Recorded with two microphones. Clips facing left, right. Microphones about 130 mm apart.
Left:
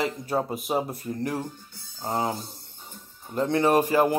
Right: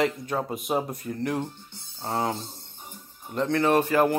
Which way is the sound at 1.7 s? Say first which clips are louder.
Even; 25° right (ahead or behind).